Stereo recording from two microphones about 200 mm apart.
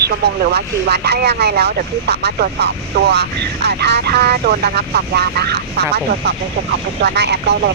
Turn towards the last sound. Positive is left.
turn(degrees=-55)  # may be behind; listen again after turning